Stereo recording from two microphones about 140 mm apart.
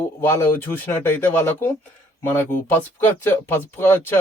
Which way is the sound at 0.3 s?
15° left (ahead or behind).